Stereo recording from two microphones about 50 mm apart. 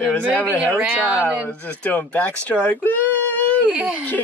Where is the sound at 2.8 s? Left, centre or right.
Left.